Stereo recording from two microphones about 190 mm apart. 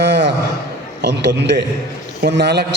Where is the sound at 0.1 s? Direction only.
65° right (ahead or behind).